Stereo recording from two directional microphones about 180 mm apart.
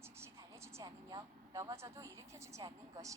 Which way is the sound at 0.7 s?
20° right (ahead or behind).